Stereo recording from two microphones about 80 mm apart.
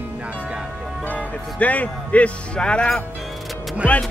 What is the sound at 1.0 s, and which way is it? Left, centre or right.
Speech, centre.